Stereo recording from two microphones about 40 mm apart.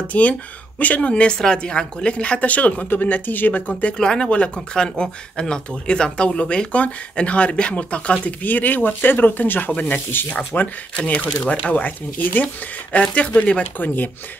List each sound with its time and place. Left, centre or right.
0.1 s speech: left
1.6 s speech: left
4.0 s speech: centre
6.7 s speech: left
8.4 s speech: left
9.7 s speech: left
10.1 s speech: left
11.0 s speech: left
11.7 s speech: left
13.1 s speech: left
13.7 s speech: left